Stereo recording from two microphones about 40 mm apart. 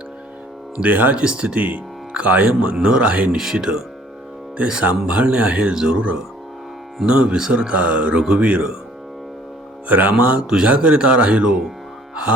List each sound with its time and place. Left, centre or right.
0.8 s speech: right
1.1 s speech: right
3.3 s speech: centre
4.5 s speech: right
5.7 s speech: centre
7.0 s speech: right
8.1 s speech: right
8.4 s speech: right
9.9 s speech: right
10.4 s speech: right